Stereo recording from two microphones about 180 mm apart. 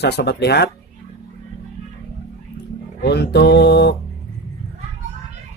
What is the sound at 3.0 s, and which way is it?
Music, 65° left (ahead or behind).